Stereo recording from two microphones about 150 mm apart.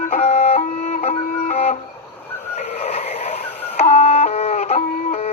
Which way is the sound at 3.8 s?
50° left (ahead or behind).